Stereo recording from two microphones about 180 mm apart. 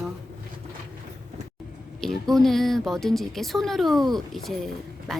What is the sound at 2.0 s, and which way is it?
A woman's voice, centre (ahead or behind).